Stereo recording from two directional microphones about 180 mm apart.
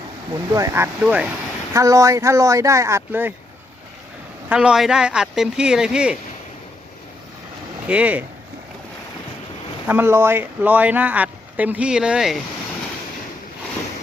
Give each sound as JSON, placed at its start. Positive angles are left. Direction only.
{"t": 0.5, "sound": "speech", "side_deg": -15}
{"t": 4.4, "sound": "speech", "side_deg": -5}
{"t": 7.9, "sound": "speech", "side_deg": -5}
{"t": 9.8, "sound": "speech", "side_deg": -10}